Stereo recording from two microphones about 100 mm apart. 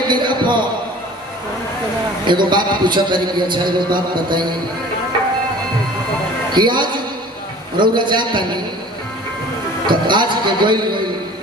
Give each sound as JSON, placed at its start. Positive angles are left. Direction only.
{"t": 0.0, "sound": "a man's voice", "side_deg": -50}
{"t": 2.2, "sound": "a man's voice", "side_deg": -50}
{"t": 6.5, "sound": "a man's voice", "side_deg": -50}
{"t": 9.8, "sound": "a man's voice", "side_deg": -50}